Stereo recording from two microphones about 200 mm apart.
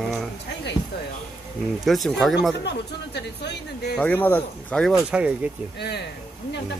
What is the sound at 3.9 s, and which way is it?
Speech, 10° left (ahead or behind).